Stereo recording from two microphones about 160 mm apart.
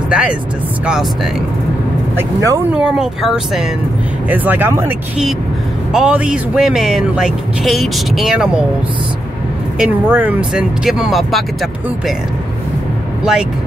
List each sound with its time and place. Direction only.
0.1 s speech: 5° right (ahead or behind)
2.1 s speech: 20° right (ahead or behind)
2.7 s speech: 5° right (ahead or behind)
5.9 s speech: 5° right (ahead or behind)
9.8 s speech: 10° right (ahead or behind)
13.2 s speech: 5° right (ahead or behind)